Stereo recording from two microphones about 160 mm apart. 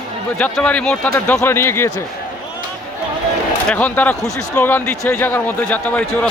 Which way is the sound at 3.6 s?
10° left (ahead or behind).